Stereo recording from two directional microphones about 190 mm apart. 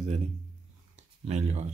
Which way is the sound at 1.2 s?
35° right (ahead or behind).